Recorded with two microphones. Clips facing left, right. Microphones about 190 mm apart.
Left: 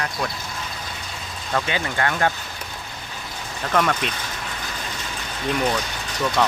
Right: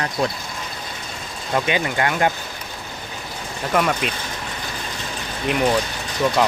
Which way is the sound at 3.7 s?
10° right (ahead or behind).